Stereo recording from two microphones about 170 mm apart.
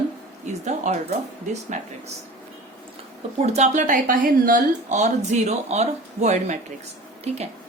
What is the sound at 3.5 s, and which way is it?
Speech, 45° right (ahead or behind).